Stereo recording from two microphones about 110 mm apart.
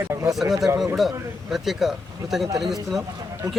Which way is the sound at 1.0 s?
Centre (ahead or behind).